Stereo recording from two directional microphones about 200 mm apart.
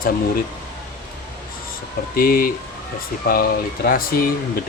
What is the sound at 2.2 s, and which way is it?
Speech, 45° left (ahead or behind).